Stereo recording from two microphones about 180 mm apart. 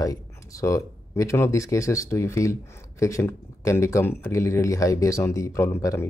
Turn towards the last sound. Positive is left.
turn(degrees=15)  # may be behind; listen again after turning